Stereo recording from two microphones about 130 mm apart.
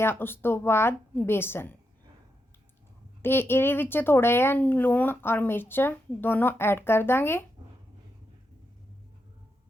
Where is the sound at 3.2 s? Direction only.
15° left (ahead or behind).